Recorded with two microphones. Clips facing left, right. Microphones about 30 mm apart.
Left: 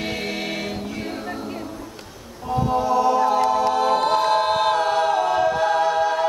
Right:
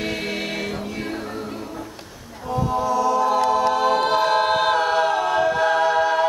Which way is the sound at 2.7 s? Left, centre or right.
Left.